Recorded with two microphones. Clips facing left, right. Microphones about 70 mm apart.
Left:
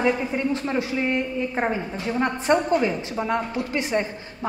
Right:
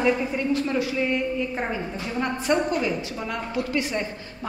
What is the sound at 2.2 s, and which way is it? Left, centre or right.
A woman's voice, left.